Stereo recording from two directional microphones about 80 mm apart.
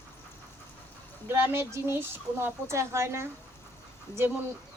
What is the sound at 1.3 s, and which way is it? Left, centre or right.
Speech, right.